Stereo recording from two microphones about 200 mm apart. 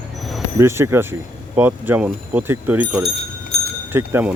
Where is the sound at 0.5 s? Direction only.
15° right (ahead or behind).